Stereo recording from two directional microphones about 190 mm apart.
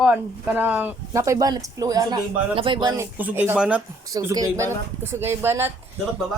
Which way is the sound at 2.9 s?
10° right (ahead or behind).